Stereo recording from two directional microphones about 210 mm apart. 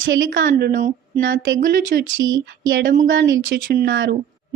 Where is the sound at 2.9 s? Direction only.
45° right (ahead or behind).